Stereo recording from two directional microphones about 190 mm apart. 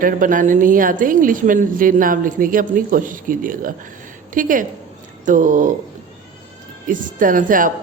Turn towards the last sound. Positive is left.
turn(degrees=-45)  # may be behind; listen again after turning